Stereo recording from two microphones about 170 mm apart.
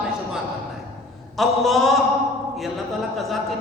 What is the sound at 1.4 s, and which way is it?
Music, centre (ahead or behind).